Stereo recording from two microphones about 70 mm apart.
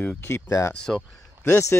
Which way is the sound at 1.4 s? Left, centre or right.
Left.